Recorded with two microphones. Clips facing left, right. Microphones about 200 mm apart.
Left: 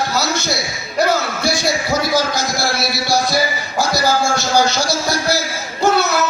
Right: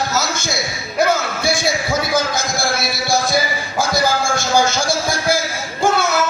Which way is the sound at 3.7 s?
50° right (ahead or behind).